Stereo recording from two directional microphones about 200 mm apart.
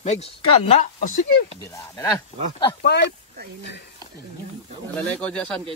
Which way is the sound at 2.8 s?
55° left (ahead or behind).